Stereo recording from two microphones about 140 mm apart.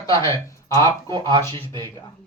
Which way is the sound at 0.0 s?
20° left (ahead or behind).